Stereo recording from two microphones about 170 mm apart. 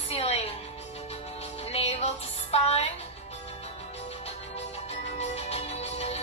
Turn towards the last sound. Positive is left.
turn(degrees=40)  # may be behind; listen again after turning